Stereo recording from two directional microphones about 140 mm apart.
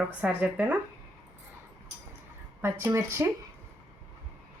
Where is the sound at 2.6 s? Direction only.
15° right (ahead or behind).